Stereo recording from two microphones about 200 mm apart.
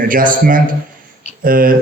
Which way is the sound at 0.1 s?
45° right (ahead or behind).